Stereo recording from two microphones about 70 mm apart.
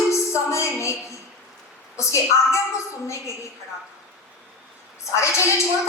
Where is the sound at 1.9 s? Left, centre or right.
Left.